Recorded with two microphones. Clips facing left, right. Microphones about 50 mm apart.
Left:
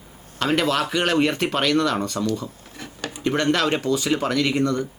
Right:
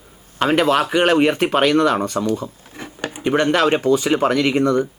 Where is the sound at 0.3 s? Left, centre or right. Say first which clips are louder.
Right 5 dB; right.